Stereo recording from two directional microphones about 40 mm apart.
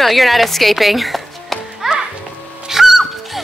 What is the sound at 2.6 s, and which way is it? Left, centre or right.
Music, centre.